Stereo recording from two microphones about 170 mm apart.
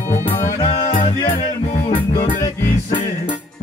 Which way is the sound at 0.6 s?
40° left (ahead or behind).